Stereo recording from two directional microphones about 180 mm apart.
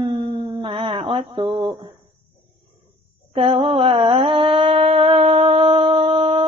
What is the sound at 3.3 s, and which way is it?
Mantra, 30° right (ahead or behind).